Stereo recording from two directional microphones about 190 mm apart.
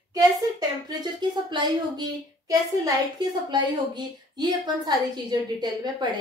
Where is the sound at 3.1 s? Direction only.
20° right (ahead or behind).